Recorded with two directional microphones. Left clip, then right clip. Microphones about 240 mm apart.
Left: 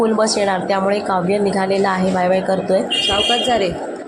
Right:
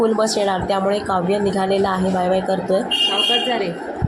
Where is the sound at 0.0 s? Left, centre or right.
Centre.